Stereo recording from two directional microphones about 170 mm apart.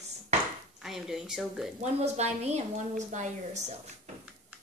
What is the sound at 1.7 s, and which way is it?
A woman's voice, 40° right (ahead or behind).